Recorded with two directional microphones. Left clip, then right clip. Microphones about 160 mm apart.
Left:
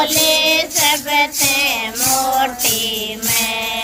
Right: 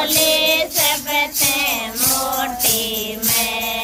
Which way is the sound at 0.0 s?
15° left (ahead or behind).